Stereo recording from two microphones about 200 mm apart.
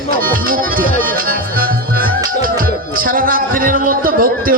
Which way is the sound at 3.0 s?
45° right (ahead or behind).